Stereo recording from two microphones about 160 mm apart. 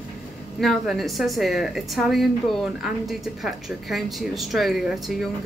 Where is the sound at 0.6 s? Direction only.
Centre (ahead or behind).